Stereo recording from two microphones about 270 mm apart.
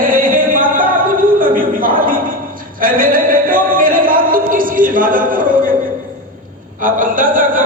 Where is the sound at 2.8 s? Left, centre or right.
Right.